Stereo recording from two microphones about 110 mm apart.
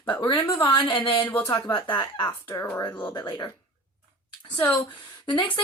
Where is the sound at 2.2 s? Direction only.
20° left (ahead or behind).